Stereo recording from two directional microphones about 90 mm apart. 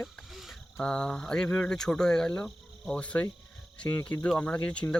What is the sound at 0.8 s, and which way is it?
Speech, 10° left (ahead or behind).